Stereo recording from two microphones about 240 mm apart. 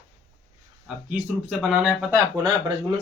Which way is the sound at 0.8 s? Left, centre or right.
Centre.